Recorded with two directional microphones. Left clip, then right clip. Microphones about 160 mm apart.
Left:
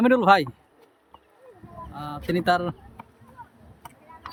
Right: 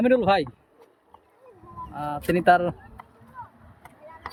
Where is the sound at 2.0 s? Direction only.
Centre (ahead or behind).